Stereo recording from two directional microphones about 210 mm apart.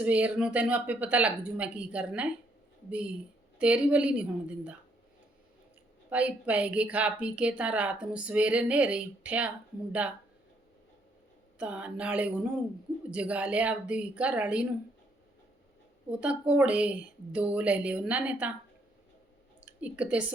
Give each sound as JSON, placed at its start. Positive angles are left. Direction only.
{"t": 0.0, "sound": "a woman's voice", "side_deg": -5}
{"t": 3.6, "sound": "a woman's voice", "side_deg": -5}
{"t": 6.1, "sound": "a woman's voice", "side_deg": -5}
{"t": 11.6, "sound": "a woman's voice", "side_deg": -5}
{"t": 16.2, "sound": "a woman's voice", "side_deg": -5}
{"t": 19.5, "sound": "speech", "side_deg": -5}